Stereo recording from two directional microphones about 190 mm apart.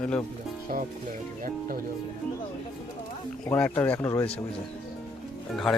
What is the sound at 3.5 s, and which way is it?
Speech, 10° left (ahead or behind).